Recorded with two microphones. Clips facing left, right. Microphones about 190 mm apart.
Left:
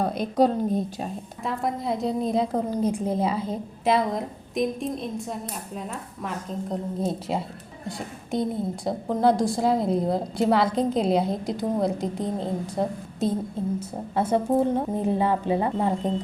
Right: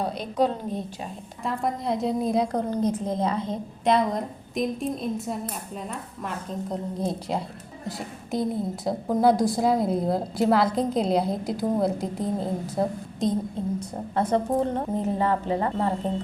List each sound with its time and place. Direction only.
0.0 s a woman's voice: 50° left (ahead or behind)
1.5 s a woman's voice: centre (ahead or behind)
13.7 s a woman's voice: 10° left (ahead or behind)